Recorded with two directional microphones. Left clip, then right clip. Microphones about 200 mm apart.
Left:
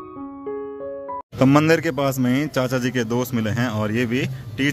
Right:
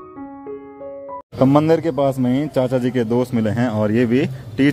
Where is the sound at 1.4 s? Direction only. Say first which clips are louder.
Right 2 dB; 5° right (ahead or behind); by 4.7 s 30° right (ahead or behind).